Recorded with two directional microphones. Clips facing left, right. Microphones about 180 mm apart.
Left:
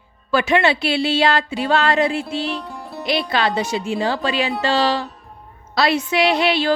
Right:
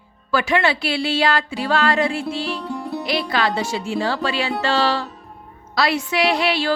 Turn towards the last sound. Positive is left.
turn(degrees=20)  # may be behind; listen again after turning